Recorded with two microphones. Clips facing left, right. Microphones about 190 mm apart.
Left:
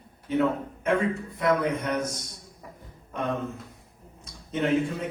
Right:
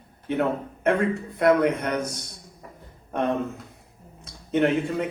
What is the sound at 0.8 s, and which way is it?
A man's voice, 65° right (ahead or behind).